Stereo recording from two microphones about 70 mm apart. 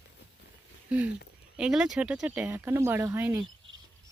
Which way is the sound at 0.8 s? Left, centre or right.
Centre.